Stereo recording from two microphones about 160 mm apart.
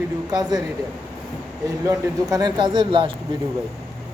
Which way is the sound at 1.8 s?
25° right (ahead or behind).